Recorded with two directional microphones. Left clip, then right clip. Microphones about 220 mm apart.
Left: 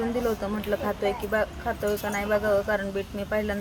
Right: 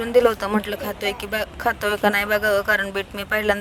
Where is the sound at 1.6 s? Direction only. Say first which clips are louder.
Right 8 dB; 50° right (ahead or behind).